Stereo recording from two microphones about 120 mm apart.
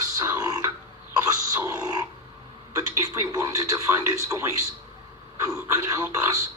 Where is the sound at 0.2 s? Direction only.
25° right (ahead or behind).